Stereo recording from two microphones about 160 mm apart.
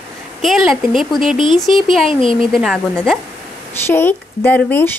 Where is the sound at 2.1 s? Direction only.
35° left (ahead or behind).